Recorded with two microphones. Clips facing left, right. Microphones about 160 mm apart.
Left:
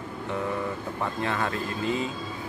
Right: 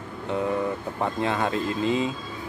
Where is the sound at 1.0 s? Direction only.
20° right (ahead or behind).